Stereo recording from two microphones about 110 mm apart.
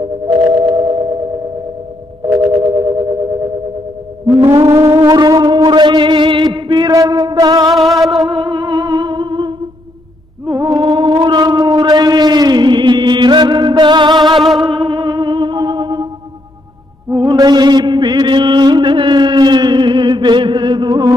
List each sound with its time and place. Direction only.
0.5 s a sound: 40° right (ahead or behind)
2.5 s music: 35° right (ahead or behind)
4.6 s music: 30° right (ahead or behind)
7.6 s music: centre (ahead or behind)
8.3 s music: 50° right (ahead or behind)
10.6 s music: 40° right (ahead or behind)
17.1 s mantra: 40° right (ahead or behind)